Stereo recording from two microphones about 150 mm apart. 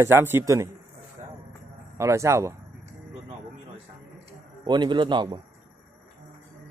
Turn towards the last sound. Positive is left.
turn(degrees=-35)  # may be behind; listen again after turning